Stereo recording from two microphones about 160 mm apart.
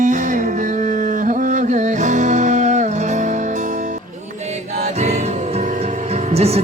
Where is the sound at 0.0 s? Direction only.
50° right (ahead or behind).